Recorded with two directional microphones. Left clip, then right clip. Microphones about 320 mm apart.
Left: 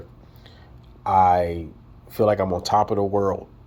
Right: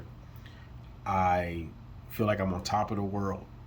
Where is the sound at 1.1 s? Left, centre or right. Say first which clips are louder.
Left 11 dB; centre.